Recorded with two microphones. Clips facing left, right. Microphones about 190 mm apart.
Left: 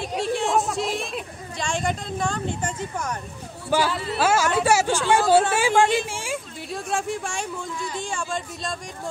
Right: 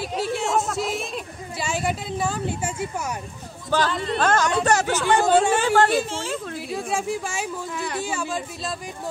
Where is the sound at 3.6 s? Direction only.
10° left (ahead or behind).